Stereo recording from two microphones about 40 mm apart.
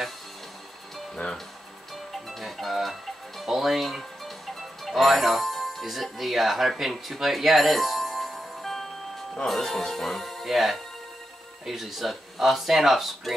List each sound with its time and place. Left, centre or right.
1.2 s speech: left
2.2 s speech: centre